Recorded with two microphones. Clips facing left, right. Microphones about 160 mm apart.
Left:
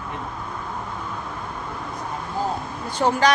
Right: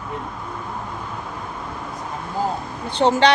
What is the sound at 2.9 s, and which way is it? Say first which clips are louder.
Speech: right 3 dB; 25° right (ahead or behind).